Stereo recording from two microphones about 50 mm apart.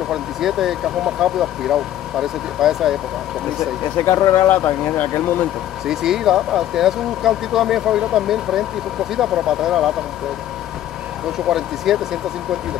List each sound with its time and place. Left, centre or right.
0.1 s speech: centre
4.0 s speech: left
4.5 s speech: left
5.9 s speech: centre
11.3 s speech: centre